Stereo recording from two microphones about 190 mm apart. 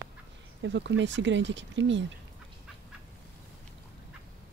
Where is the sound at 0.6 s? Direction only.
70° right (ahead or behind).